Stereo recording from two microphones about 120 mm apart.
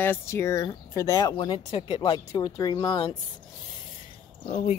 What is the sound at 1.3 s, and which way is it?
Speech, 45° left (ahead or behind).